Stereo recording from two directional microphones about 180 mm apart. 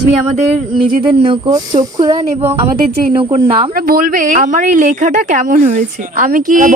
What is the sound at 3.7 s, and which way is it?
A woman's voice, 55° right (ahead or behind).